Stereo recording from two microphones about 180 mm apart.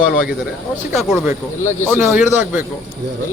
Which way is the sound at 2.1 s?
10° right (ahead or behind).